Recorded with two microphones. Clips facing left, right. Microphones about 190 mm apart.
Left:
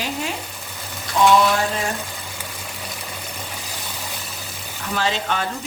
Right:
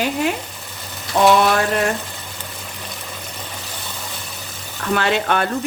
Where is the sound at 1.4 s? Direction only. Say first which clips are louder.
Right 3 dB; 65° right (ahead or behind).